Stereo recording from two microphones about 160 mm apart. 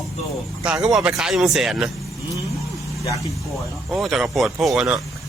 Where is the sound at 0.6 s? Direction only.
5° right (ahead or behind).